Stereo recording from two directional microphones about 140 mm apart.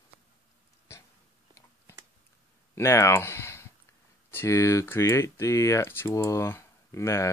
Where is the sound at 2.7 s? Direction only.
20° left (ahead or behind).